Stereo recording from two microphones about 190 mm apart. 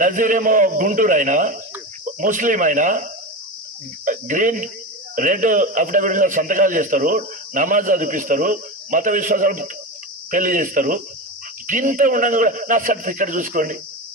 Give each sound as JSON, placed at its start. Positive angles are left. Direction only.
{"t": 0.0, "sound": "a man's voice", "side_deg": -45}